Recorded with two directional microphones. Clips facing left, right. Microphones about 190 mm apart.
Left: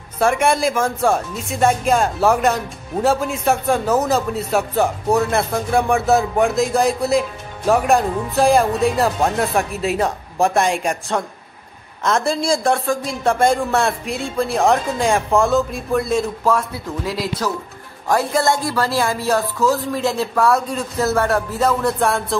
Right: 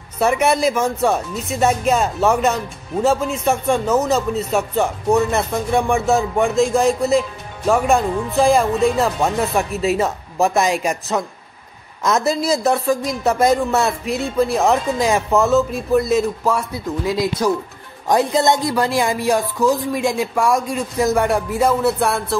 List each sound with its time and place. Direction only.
0.2 s speech: 5° right (ahead or behind)